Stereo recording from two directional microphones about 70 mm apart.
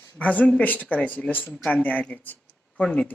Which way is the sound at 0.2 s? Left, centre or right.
Left.